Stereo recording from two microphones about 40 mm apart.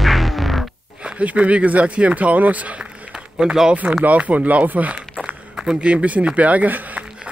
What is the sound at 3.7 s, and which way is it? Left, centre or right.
Speech, right.